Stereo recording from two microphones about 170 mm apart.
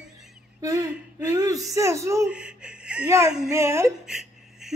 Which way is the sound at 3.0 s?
15° right (ahead or behind).